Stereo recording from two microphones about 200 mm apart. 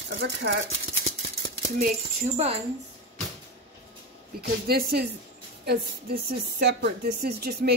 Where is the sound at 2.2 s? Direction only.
30° right (ahead or behind).